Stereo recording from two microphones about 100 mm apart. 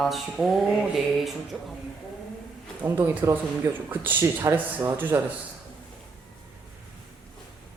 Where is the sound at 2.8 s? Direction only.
20° right (ahead or behind).